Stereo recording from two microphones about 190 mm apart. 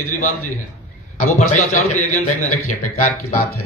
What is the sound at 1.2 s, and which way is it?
A man's voice, 35° left (ahead or behind).